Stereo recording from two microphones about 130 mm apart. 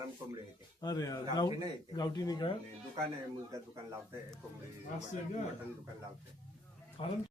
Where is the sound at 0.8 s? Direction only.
30° left (ahead or behind).